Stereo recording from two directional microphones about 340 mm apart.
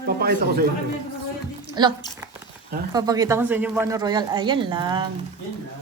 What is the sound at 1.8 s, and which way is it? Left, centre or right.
Speech, centre.